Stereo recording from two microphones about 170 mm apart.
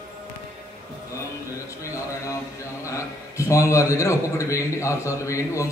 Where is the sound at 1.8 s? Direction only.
15° left (ahead or behind).